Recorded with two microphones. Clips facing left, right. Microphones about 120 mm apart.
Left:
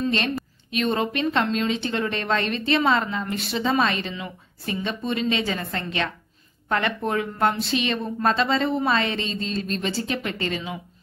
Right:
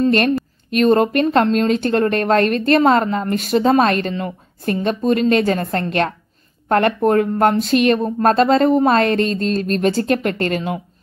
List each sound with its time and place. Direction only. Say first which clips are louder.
0.7 s speech: right 10 dB; 50° right (ahead or behind)